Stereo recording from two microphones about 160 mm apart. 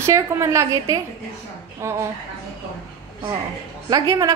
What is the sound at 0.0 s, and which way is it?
A woman's voice, 20° right (ahead or behind).